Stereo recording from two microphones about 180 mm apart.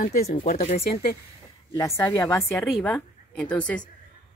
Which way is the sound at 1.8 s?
20° left (ahead or behind).